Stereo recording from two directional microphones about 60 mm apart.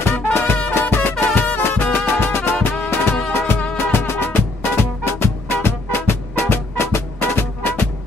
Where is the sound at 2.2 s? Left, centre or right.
Left.